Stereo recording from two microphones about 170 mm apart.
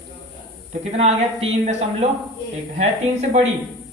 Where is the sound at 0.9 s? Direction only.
40° right (ahead or behind).